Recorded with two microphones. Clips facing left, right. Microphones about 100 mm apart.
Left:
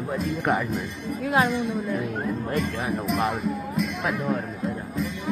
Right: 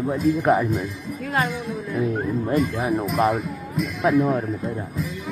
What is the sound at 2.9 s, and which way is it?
Speech, centre (ahead or behind).